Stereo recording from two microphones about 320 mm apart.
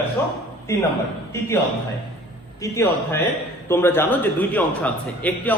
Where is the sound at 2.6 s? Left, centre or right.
Centre.